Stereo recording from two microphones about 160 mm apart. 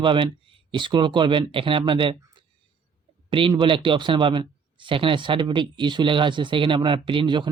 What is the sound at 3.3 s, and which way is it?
Speech, 30° right (ahead or behind).